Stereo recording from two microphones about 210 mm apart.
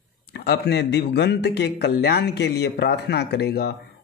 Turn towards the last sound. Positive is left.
turn(degrees=50)  # may be behind; listen again after turning